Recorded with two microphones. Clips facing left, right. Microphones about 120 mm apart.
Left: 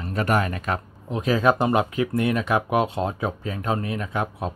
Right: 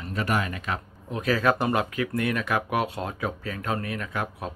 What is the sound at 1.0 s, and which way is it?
Speech, 20° left (ahead or behind).